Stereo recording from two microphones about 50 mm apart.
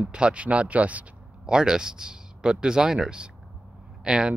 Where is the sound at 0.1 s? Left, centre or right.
Right.